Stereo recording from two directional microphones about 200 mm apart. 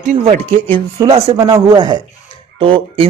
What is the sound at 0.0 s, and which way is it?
Speech, 40° right (ahead or behind).